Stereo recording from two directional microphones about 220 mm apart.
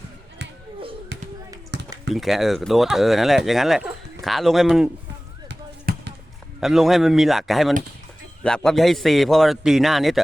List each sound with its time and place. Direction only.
1.1 s basketball bounce: 50° right (ahead or behind)
1.7 s typing: 50° right (ahead or behind)
2.1 s speech: centre (ahead or behind)
5.5 s basketball bounce: 50° right (ahead or behind)
6.6 s speech: centre (ahead or behind)